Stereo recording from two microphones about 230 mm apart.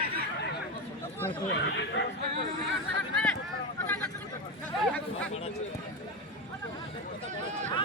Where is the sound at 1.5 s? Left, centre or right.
Left.